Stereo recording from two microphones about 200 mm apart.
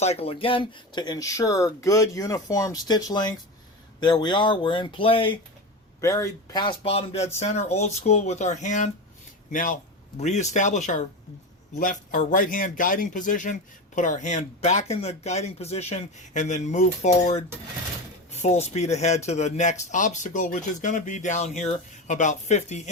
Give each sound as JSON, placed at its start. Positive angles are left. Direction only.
{"t": 0.0, "sound": "speech", "side_deg": 30}
{"t": 6.0, "sound": "speech", "side_deg": 15}